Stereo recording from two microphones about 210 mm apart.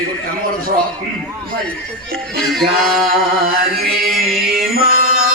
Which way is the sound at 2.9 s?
45° right (ahead or behind).